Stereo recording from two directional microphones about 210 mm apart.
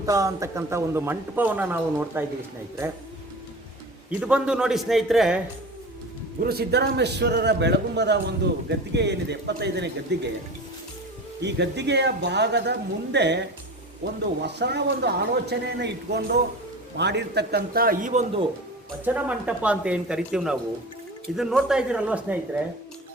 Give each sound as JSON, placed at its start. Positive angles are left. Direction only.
{"t": 0.0, "sound": "a man's voice", "side_deg": -15}
{"t": 4.2, "sound": "speech", "side_deg": -5}
{"t": 6.4, "sound": "a man's voice", "side_deg": -50}
{"t": 11.3, "sound": "speech", "side_deg": -55}
{"t": 14.4, "sound": "a man's voice", "side_deg": -55}
{"t": 19.0, "sound": "speech", "side_deg": -5}